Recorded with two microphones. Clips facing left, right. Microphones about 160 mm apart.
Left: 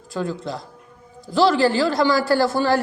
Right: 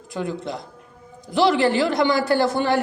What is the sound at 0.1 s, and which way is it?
A man's voice, 20° right (ahead or behind).